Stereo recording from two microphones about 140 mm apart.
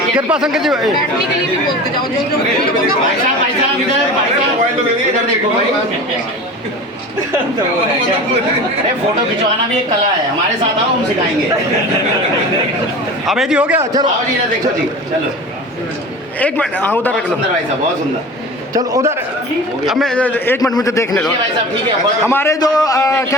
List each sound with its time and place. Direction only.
0.3 s speech: 5° right (ahead or behind)
13.2 s speech: 5° right (ahead or behind)
16.4 s a man's voice: 10° left (ahead or behind)
18.7 s a man's voice: 25° right (ahead or behind)
19.8 s a man's voice: centre (ahead or behind); by 21.2 s 25° left (ahead or behind)
22.3 s a man's voice: 15° left (ahead or behind)
22.6 s a man's voice: 30° left (ahead or behind)